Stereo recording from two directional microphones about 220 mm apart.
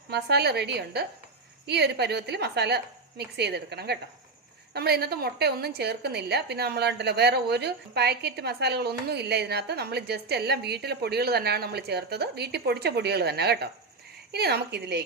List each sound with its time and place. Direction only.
0.1 s a woman's voice: 50° right (ahead or behind)